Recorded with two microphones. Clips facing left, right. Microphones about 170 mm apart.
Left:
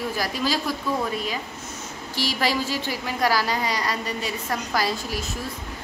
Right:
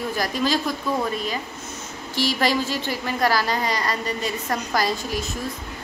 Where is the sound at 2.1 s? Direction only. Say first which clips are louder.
Right 3 dB; 10° left (ahead or behind).